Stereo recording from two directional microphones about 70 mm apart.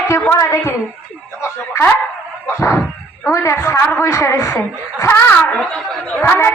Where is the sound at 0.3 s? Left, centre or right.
Left.